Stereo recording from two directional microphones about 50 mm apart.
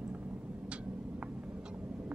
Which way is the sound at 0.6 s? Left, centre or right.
Right.